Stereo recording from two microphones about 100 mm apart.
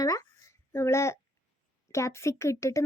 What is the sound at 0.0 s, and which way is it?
A child's voice, 35° left (ahead or behind).